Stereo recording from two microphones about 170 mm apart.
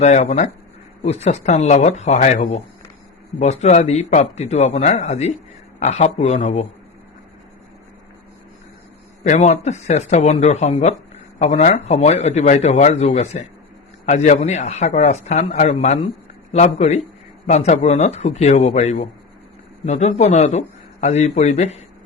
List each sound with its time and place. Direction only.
0.0 s a man's voice: 40° left (ahead or behind)
9.2 s a man's voice: 45° left (ahead or behind)